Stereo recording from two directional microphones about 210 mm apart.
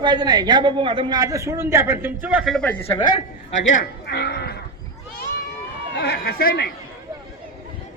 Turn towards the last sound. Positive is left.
turn(degrees=45)  # may be behind; listen again after turning